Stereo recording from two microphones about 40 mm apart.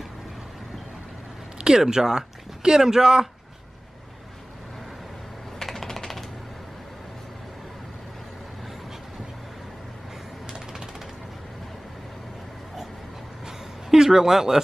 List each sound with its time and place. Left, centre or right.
1.6 s speech: centre
5.6 s typing: centre
13.5 s a sound: centre